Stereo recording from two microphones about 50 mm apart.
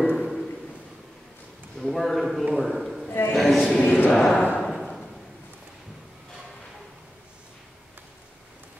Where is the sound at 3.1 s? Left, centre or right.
Left.